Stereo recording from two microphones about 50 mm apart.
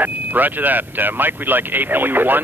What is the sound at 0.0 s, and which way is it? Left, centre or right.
Speech, right.